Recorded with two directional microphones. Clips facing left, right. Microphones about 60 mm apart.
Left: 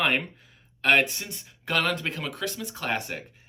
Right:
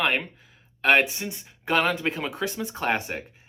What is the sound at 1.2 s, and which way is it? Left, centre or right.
Speech, right.